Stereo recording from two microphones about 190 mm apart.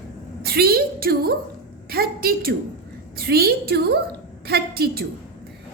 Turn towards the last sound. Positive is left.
turn(degrees=-55)  # may be behind; listen again after turning